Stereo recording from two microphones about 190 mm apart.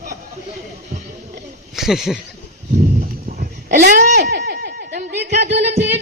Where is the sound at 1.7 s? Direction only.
Centre (ahead or behind).